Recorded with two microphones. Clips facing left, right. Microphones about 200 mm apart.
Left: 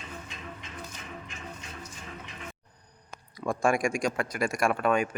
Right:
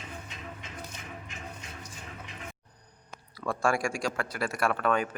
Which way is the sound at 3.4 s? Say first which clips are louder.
Left 2 dB; 15° left (ahead or behind).